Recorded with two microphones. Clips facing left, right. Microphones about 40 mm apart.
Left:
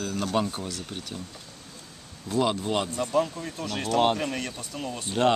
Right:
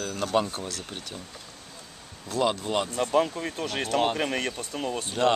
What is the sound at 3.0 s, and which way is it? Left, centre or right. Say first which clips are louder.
Speech: right 2 dB; right.